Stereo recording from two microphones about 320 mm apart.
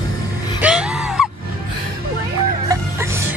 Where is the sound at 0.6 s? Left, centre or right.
Centre.